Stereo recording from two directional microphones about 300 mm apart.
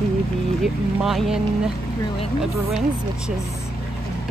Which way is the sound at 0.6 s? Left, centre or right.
Centre.